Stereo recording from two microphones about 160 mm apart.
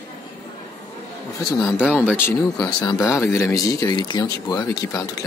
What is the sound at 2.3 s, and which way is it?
Speech, 20° left (ahead or behind).